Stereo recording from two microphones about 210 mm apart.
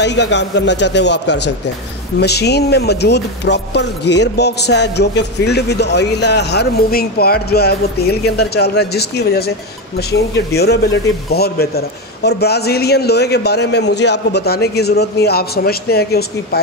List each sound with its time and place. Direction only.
0.0 s a man's voice: 55° left (ahead or behind)